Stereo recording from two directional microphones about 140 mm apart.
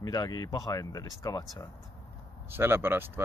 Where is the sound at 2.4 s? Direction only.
15° right (ahead or behind).